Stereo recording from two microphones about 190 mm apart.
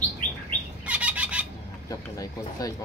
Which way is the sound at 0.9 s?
5° right (ahead or behind).